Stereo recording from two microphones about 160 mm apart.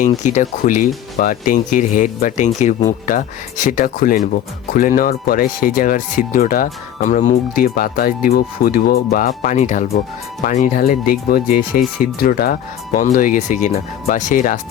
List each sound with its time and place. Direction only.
0.2 s speech: 50° left (ahead or behind); by 9.0 s 70° left (ahead or behind)
9.1 s speech: 55° left (ahead or behind)